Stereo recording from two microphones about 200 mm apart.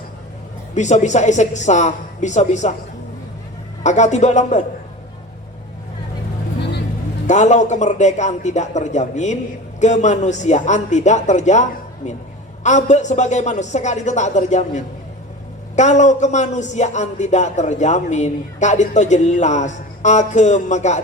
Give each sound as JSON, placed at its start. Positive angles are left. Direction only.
{"t": 0.7, "sound": "a man's voice", "side_deg": 35}
{"t": 3.8, "sound": "a man's voice", "side_deg": 35}
{"t": 7.3, "sound": "a man's voice", "side_deg": 35}